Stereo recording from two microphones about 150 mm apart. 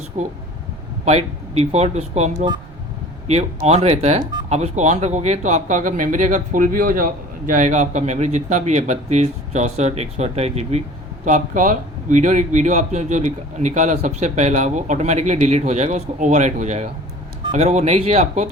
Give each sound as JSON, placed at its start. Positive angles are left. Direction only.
{"t": 0.1, "sound": "speech", "side_deg": -35}
{"t": 1.0, "sound": "speech", "side_deg": -45}
{"t": 11.3, "sound": "speech", "side_deg": -60}